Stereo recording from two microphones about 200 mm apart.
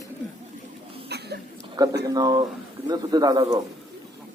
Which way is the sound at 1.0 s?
55° right (ahead or behind).